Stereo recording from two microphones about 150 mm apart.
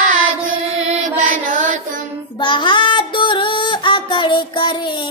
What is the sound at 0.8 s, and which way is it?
Mantra, 60° right (ahead or behind).